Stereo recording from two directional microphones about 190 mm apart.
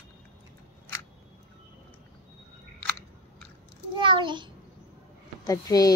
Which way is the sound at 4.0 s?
25° right (ahead or behind).